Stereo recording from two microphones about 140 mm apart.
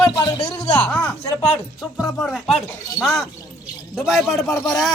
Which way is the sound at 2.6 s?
20° left (ahead or behind).